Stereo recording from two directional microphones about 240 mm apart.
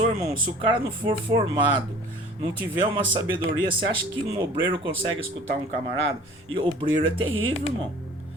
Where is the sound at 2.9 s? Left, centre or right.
Right.